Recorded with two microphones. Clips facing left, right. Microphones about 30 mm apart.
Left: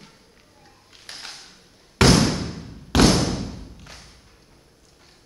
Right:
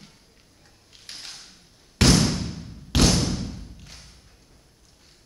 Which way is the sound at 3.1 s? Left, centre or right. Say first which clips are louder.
Left 3 dB; centre.